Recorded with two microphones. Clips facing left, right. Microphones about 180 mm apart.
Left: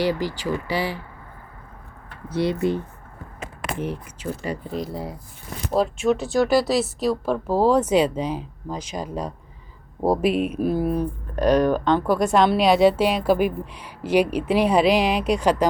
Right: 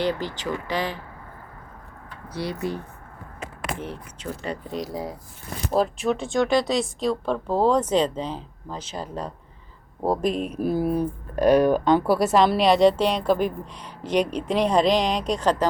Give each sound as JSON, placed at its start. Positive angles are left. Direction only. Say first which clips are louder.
{"t": 0.0, "sound": "speech", "louder": "left 2 dB", "side_deg": 10}
{"t": 2.3, "sound": "speech", "louder": "left 7 dB", "side_deg": 25}
{"t": 3.8, "sound": "speech", "louder": "left 5 dB", "side_deg": 10}